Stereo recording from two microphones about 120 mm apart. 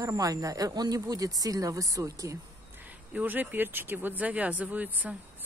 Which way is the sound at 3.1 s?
15° right (ahead or behind).